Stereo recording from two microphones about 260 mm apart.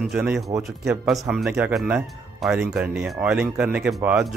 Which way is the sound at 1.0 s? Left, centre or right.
Centre.